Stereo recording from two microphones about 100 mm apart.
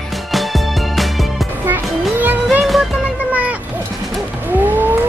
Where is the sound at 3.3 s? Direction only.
15° right (ahead or behind).